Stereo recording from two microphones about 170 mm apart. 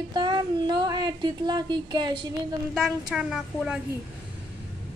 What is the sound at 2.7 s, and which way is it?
A woman's voice, centre (ahead or behind).